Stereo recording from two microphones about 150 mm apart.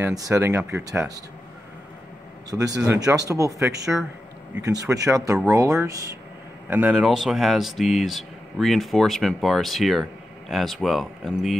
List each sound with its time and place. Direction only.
0.0 s speech: 20° right (ahead or behind)
2.5 s speech: 25° right (ahead or behind)
6.7 s speech: 10° right (ahead or behind)